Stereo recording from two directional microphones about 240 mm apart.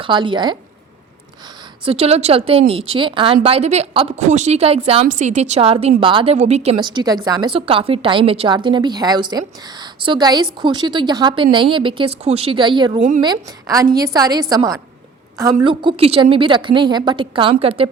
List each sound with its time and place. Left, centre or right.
0.0 s a woman's voice: centre
1.8 s a woman's voice: right
13.0 s speech: right
13.2 s a woman's voice: centre